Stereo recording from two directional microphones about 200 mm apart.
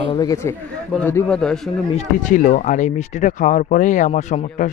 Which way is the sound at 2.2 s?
40° left (ahead or behind).